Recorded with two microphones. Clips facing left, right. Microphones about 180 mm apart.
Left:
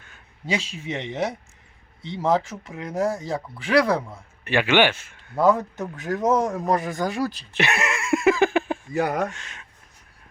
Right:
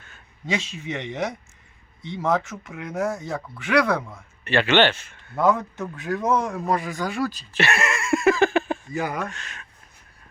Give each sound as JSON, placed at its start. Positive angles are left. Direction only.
{"t": 0.4, "sound": "speech", "side_deg": 30}
{"t": 4.0, "sound": "speech", "side_deg": 10}
{"t": 5.4, "sound": "speech", "side_deg": 35}
{"t": 7.5, "sound": "a sound", "side_deg": 15}
{"t": 9.0, "sound": "speech", "side_deg": 65}
{"t": 9.2, "sound": "speech", "side_deg": 20}